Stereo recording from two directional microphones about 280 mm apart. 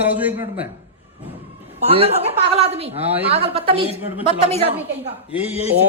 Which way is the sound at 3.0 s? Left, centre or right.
Centre.